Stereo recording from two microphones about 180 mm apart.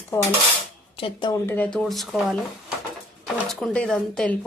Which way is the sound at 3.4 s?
5° left (ahead or behind).